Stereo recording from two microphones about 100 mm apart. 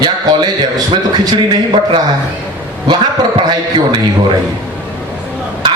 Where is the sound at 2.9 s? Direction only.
50° right (ahead or behind).